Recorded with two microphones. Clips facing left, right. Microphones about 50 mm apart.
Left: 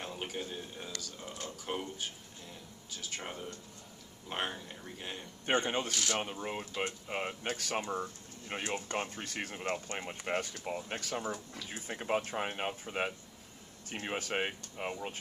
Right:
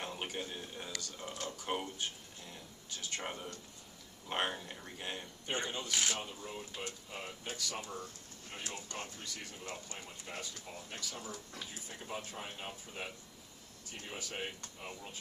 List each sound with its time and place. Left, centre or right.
0.0 s a man's voice: centre
2.5 s a sound: centre
4.3 s speech: centre
5.5 s speech: left
7.8 s speech: left